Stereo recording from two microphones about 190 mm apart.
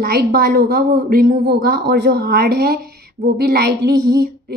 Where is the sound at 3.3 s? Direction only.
55° right (ahead or behind).